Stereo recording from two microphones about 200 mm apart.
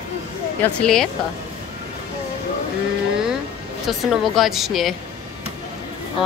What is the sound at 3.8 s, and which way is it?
A woman's voice, centre (ahead or behind).